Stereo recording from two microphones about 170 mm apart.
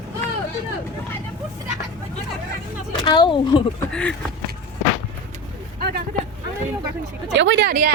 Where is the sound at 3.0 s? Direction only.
25° left (ahead or behind).